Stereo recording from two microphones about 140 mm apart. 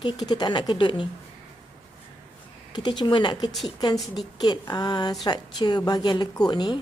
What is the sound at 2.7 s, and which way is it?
A woman's voice, 35° left (ahead or behind).